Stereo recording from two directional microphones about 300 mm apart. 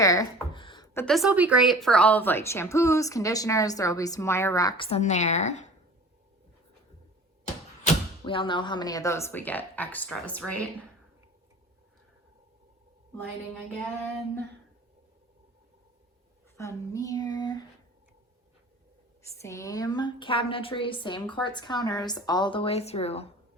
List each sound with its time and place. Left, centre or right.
0.0 s a sound: centre
1.0 s a woman's voice: centre; by 5.7 s left
7.9 s a woman's voice: centre
16.6 s a woman's voice: centre
19.4 s a woman's voice: centre